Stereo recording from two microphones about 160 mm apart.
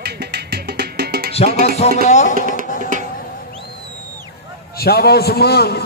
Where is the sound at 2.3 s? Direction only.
60° right (ahead or behind).